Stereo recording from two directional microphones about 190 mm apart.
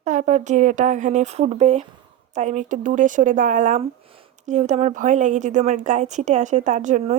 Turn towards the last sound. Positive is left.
turn(degrees=-40)  # may be behind; listen again after turning